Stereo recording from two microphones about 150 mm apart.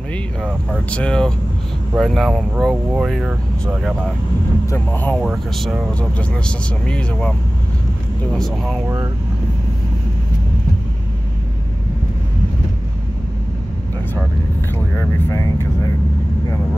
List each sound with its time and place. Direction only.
0.1 s speech: 10° left (ahead or behind)
4.6 s speech: 10° left (ahead or behind)
5.2 s speech: centre (ahead or behind)
8.4 s speech: centre (ahead or behind)
8.8 s speech: 20° right (ahead or behind)
15.0 s speech: 15° left (ahead or behind)